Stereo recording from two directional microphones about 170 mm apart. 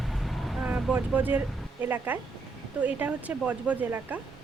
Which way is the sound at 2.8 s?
10° right (ahead or behind).